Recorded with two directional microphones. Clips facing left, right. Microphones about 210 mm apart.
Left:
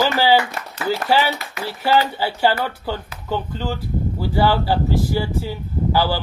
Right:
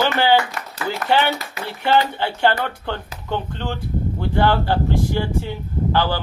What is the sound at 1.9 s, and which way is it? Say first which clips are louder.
Speech: even; 5° left (ahead or behind).